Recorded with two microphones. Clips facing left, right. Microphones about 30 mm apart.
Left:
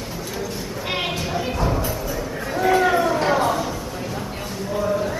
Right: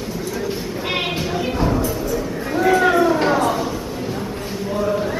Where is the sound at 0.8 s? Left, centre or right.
Centre.